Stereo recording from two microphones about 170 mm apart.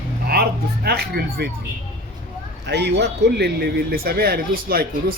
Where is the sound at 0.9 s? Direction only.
65° right (ahead or behind).